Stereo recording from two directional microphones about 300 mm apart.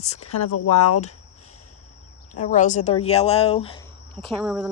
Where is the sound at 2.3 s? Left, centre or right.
Left.